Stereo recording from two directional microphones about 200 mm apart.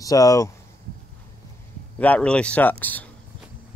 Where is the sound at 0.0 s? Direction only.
15° left (ahead or behind).